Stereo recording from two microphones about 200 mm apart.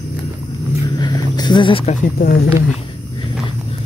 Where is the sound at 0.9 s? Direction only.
20° left (ahead or behind).